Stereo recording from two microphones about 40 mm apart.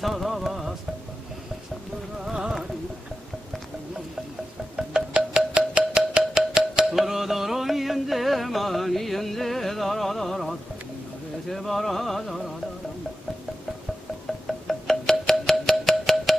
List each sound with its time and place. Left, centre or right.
0.0 s music: centre
4.7 s music: right
6.9 s music: centre
14.2 s wind chime: centre
15.8 s music: centre